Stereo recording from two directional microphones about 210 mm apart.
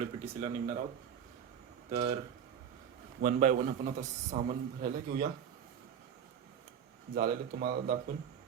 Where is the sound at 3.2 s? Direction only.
35° right (ahead or behind).